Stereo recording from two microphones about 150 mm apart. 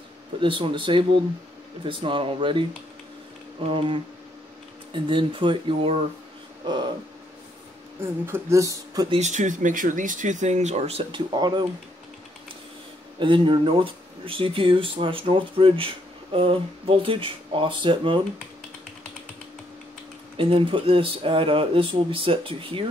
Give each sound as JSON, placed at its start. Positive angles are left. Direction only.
{"t": 0.4, "sound": "speech", "side_deg": -35}
{"t": 3.7, "sound": "speech", "side_deg": -35}
{"t": 6.6, "sound": "speech", "side_deg": -30}
{"t": 8.0, "sound": "speech", "side_deg": -15}
{"t": 9.1, "sound": "speech", "side_deg": -50}
{"t": 13.2, "sound": "speech", "side_deg": -35}
{"t": 20.3, "sound": "speech", "side_deg": -35}